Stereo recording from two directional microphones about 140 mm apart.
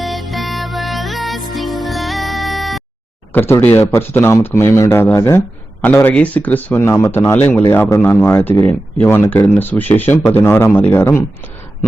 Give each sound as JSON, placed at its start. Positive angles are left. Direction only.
{"t": 0.0, "sound": "music", "side_deg": 0}
{"t": 3.3, "sound": "speech", "side_deg": 15}